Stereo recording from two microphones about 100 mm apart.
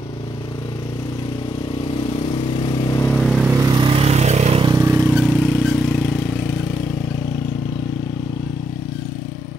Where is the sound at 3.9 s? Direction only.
85° right.